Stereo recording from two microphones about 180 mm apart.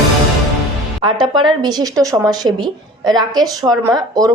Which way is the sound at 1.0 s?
25° right (ahead or behind).